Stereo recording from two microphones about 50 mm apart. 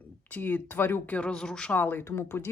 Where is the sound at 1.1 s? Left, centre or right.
Left.